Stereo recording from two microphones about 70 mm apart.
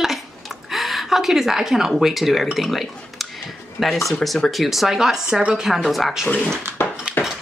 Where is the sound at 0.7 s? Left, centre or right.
Centre.